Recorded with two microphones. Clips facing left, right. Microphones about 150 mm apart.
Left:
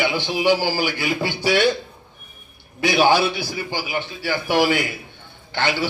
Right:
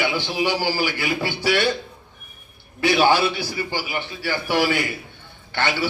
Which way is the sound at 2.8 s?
15° left (ahead or behind).